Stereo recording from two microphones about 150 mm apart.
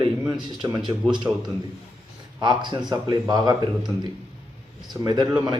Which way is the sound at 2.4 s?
30° right (ahead or behind).